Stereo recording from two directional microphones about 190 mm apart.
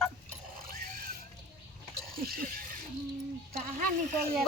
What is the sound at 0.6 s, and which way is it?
Mechanisms, 50° right (ahead or behind).